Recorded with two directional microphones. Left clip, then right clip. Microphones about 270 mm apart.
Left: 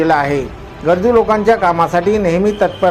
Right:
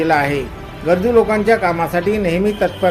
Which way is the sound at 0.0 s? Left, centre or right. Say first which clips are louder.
Left 2 dB; centre.